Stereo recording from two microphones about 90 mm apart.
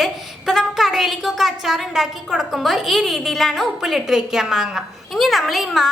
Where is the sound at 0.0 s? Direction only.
5° right (ahead or behind).